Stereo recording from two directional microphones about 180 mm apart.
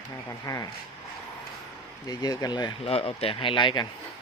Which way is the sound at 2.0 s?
20° left (ahead or behind).